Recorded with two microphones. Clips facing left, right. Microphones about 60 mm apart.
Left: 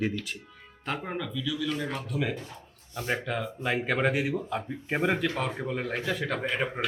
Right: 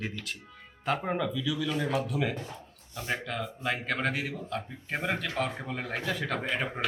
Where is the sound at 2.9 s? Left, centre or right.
Centre.